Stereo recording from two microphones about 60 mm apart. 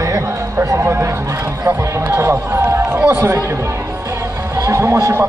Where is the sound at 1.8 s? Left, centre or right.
Right.